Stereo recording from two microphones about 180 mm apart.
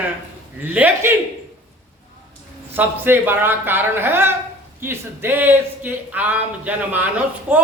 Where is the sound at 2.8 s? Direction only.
10° right (ahead or behind).